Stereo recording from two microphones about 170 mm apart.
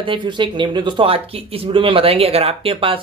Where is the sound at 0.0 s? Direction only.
30° right (ahead or behind).